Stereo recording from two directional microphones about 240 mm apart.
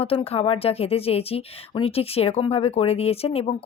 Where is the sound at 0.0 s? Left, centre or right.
Left.